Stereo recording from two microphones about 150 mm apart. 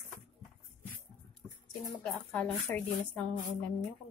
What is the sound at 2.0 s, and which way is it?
Speech, 10° left (ahead or behind).